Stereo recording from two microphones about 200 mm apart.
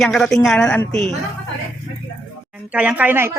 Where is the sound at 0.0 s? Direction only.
Centre (ahead or behind).